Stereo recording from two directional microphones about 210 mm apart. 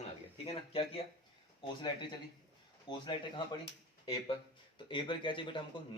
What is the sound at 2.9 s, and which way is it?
Speech, 20° left (ahead or behind).